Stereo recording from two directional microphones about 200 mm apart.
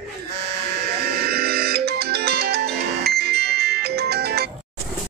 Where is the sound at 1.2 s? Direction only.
50° right (ahead or behind).